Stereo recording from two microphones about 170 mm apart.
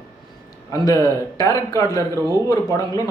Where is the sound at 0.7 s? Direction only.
20° left (ahead or behind).